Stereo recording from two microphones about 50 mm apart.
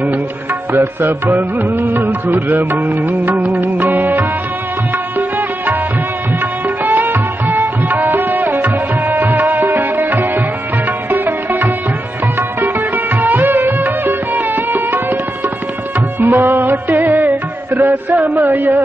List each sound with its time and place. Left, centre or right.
0.7 s music: right
6.8 s music: right
16.2 s music: right
17.7 s a sound: right